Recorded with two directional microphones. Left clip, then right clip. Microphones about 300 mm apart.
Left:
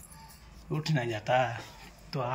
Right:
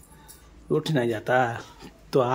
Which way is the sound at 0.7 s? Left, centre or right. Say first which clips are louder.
Right 9 dB; centre.